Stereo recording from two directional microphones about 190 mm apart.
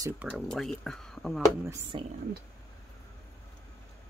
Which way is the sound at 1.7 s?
25° right (ahead or behind).